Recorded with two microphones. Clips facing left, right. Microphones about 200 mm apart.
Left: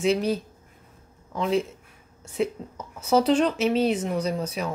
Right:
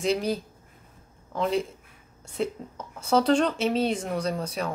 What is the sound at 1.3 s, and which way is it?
Speech, centre (ahead or behind).